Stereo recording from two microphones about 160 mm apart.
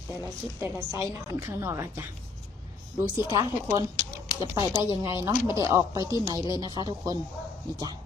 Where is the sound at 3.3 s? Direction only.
25° right (ahead or behind).